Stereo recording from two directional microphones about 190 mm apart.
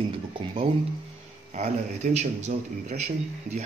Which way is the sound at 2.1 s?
35° right (ahead or behind).